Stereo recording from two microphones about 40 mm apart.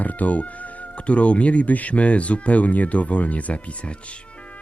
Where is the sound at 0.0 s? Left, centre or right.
Left.